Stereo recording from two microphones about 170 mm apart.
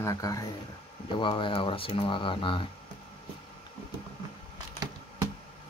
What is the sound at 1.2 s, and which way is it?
Speech, 30° left (ahead or behind).